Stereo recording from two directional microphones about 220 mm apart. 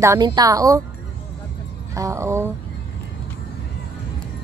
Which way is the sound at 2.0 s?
15° right (ahead or behind).